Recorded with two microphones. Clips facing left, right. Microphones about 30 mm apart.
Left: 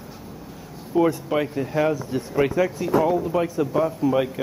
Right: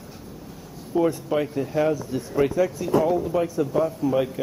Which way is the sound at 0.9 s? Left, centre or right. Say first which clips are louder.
Left 2 dB; centre.